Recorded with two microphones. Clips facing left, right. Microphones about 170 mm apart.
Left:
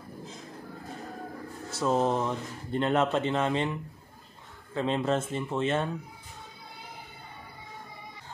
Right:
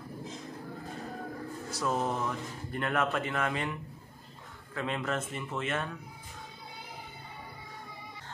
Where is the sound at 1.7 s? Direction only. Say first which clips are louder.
Left 6 dB; 25° left (ahead or behind).